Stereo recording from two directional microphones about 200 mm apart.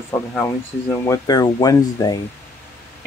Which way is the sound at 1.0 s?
15° left (ahead or behind).